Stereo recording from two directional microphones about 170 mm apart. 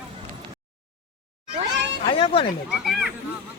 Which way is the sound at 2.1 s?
30° left (ahead or behind).